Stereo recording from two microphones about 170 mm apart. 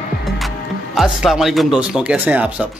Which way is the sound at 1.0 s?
Centre (ahead or behind).